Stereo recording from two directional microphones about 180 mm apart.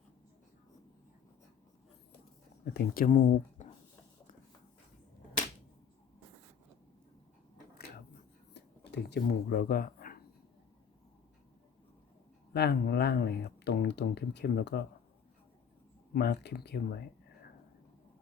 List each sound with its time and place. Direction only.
2.7 s speech: 55° left (ahead or behind)
8.5 s a sound: 70° left (ahead or behind); by 10.2 s 55° left (ahead or behind)
12.5 s speech: 60° left (ahead or behind)
16.1 s speech: 65° left (ahead or behind)